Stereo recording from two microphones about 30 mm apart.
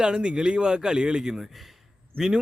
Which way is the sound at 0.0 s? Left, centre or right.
Right.